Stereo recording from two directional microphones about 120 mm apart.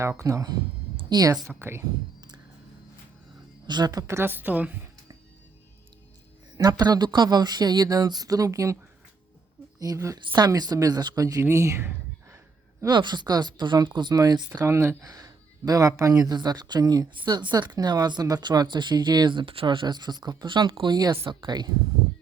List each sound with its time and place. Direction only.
0.0 s speech: 25° right (ahead or behind)
3.7 s speech: 35° right (ahead or behind)
4.0 s a woman's voice: 20° right (ahead or behind)
6.6 s a woman's voice: 35° right (ahead or behind)
12.8 s speech: 35° right (ahead or behind)
14.6 s speech: 20° right (ahead or behind); by 21.7 s 35° right (ahead or behind)